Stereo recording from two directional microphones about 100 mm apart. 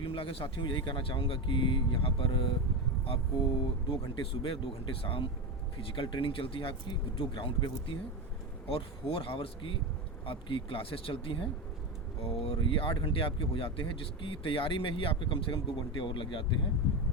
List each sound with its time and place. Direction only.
0.0 s speech: 60° left (ahead or behind)
8.6 s speech: 70° left (ahead or behind)
12.2 s speech: 75° left (ahead or behind)
12.5 s speech: 60° left (ahead or behind)